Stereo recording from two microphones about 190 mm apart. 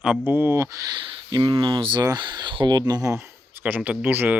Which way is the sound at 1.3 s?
25° right (ahead or behind).